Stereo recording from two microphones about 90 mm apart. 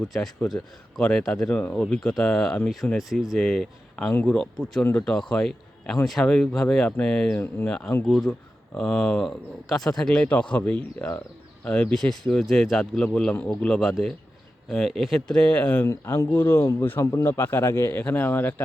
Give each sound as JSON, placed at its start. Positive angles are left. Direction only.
{"t": 0.0, "sound": "speech", "side_deg": 5}
{"t": 7.3, "sound": "speech", "side_deg": 20}
{"t": 8.0, "sound": "speech", "side_deg": 5}
{"t": 15.9, "sound": "speech", "side_deg": 30}